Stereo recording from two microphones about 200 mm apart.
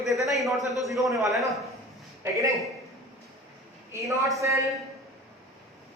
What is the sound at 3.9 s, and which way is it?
Speech, 15° right (ahead or behind).